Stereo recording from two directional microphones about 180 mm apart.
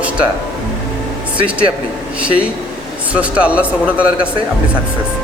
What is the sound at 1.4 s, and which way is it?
Speech, 30° right (ahead or behind).